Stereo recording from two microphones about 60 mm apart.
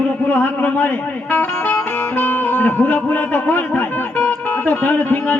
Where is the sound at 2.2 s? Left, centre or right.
Left.